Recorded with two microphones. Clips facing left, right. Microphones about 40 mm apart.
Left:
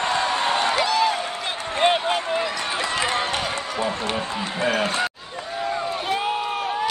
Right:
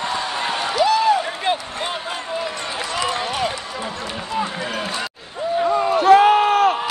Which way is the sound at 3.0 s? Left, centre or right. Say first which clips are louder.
Right 2 dB; left.